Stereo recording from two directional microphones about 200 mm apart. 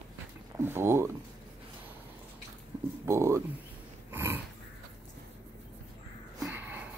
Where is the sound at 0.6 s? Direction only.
10° right (ahead or behind).